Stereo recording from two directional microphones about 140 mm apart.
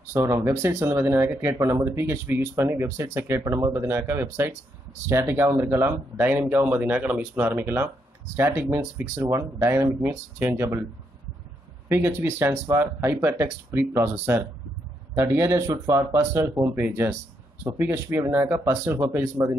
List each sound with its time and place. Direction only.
0.1 s speech: 20° right (ahead or behind)
11.9 s speech: 20° right (ahead or behind)